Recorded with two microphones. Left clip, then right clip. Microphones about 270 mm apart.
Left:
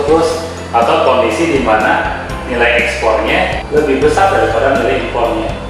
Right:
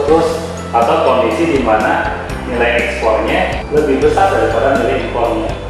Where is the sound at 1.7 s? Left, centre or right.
Centre.